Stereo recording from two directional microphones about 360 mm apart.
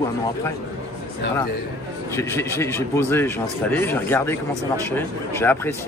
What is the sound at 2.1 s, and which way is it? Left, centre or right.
A man's voice, centre.